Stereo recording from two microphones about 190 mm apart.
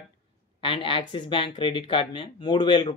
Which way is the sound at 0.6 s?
25° left (ahead or behind).